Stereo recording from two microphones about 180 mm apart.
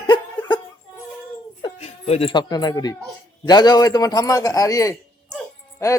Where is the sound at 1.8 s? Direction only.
35° left (ahead or behind).